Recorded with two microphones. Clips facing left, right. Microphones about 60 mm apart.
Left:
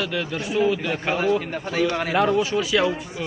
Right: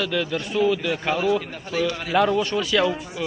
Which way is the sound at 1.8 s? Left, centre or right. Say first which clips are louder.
Left 2 dB; left.